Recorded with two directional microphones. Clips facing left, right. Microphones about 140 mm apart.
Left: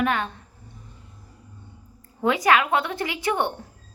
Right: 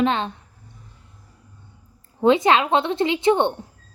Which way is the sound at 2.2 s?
25° right (ahead or behind).